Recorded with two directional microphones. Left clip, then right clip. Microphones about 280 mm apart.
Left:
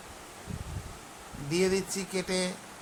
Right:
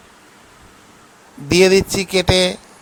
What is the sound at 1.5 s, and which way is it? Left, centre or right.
Speech, right.